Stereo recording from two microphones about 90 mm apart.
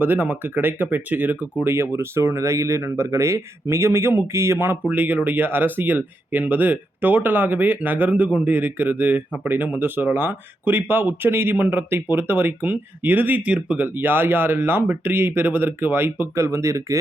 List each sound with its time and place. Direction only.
0.0 s speech: 20° right (ahead or behind)